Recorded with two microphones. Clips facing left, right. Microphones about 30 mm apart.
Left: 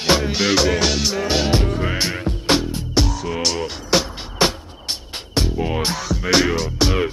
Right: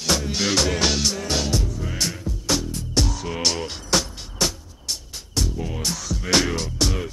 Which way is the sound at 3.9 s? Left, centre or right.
Centre.